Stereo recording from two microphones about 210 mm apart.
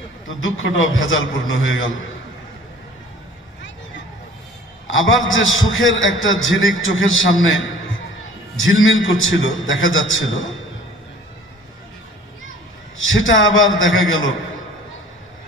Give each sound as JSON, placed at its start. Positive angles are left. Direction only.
{"t": 0.3, "sound": "a man's voice", "side_deg": 70}
{"t": 4.9, "sound": "a man's voice", "side_deg": 70}
{"t": 12.9, "sound": "a man's voice", "side_deg": 70}